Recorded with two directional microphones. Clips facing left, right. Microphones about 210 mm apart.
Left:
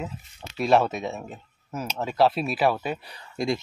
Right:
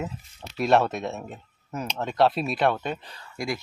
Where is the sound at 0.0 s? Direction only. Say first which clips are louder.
Right 1 dB; centre (ahead or behind).